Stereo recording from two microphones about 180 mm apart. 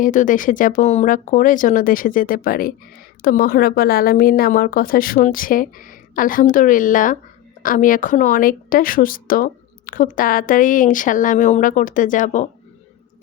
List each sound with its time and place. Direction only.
0.0 s a woman's voice: 45° left (ahead or behind)